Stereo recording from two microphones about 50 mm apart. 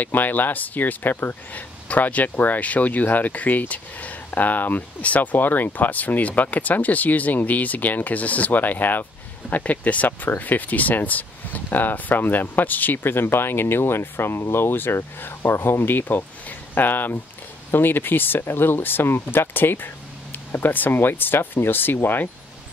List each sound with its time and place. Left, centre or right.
0.0 s speech: left